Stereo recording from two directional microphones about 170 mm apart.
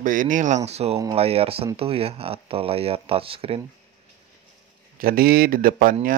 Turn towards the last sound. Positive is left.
turn(degrees=-55)  # may be behind; listen again after turning